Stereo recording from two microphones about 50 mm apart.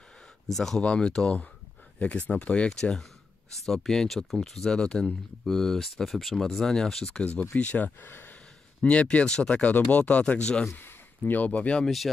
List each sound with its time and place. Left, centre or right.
0.5 s speech: centre
2.0 s speech: left
2.8 s speech: centre
7.5 s speech: left
8.1 s gasp: left
9.1 s speech: centre
10.8 s a sound: left
11.4 s speech: left
11.8 s speech: centre